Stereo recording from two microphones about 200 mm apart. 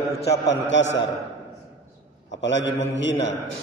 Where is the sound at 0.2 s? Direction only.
60° left (ahead or behind).